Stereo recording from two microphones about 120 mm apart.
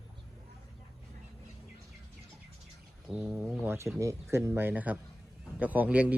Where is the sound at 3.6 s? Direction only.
20° right (ahead or behind).